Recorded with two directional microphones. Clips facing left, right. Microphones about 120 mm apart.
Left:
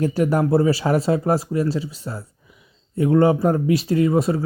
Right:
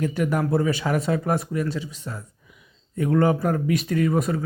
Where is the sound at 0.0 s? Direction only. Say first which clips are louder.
Left 4 dB; 35° left (ahead or behind).